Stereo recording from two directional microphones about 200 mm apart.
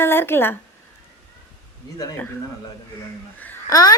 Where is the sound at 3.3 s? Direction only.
15° left (ahead or behind).